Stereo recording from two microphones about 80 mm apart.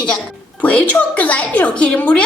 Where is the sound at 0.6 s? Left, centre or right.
Centre.